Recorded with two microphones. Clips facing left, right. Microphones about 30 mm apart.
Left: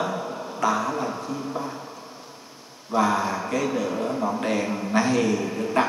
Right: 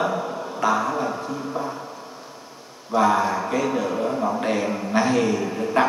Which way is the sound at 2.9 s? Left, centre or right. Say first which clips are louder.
Right 3 dB; centre.